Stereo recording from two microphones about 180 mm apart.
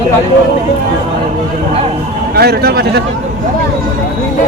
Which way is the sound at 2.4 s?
60° right (ahead or behind).